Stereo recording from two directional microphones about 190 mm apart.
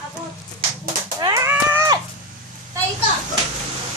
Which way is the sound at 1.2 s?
20° right (ahead or behind).